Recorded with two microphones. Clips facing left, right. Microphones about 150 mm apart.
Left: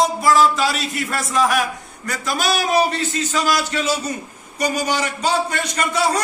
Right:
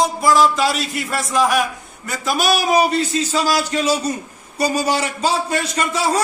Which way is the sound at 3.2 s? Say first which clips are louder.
Left 2 dB; 35° right (ahead or behind).